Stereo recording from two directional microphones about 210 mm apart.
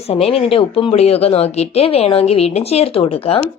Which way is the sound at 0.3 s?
25° left (ahead or behind).